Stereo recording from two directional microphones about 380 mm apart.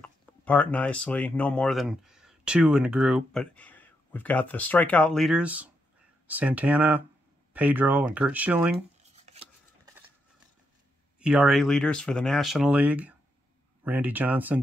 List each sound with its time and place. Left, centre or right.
0.0 s speech: centre
9.1 s a sound: centre
11.1 s speech: centre